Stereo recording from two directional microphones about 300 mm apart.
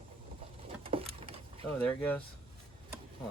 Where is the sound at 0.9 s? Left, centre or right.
Centre.